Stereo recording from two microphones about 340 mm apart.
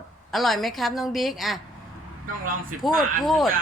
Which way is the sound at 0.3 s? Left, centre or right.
Centre.